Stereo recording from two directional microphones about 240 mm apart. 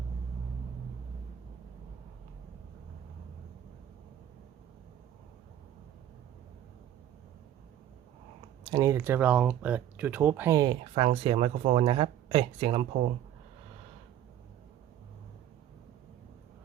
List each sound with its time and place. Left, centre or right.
8.7 s speech: centre